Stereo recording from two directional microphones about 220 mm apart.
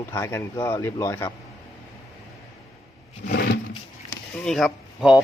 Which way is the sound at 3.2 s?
40° left (ahead or behind).